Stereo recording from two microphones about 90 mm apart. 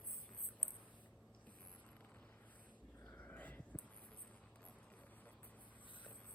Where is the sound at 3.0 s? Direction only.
15° left (ahead or behind).